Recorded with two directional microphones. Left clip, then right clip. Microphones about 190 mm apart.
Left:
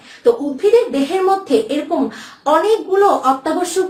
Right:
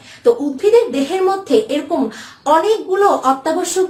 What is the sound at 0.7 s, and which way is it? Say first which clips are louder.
Speech: right 1 dB; 25° right (ahead or behind).